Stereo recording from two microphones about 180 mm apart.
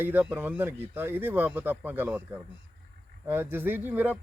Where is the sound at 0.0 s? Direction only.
10° right (ahead or behind).